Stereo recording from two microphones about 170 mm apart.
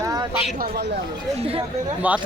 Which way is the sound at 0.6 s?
60° right (ahead or behind).